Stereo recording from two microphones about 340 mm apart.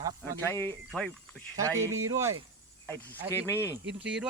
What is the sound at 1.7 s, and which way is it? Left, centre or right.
Speech, centre.